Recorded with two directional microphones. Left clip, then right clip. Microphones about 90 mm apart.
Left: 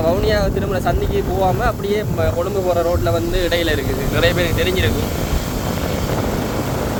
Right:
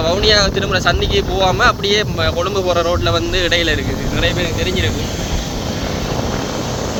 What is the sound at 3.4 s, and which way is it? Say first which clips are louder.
Speech: right 3 dB; 35° left (ahead or behind).